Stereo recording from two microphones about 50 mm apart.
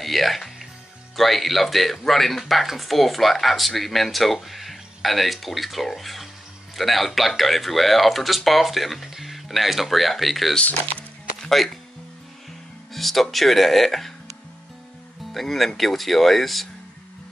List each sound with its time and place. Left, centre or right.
0.0 s music: centre
1.1 s speech: centre
10.6 s speech: left
11.3 s music: centre
12.9 s speech: centre
15.3 s speech: centre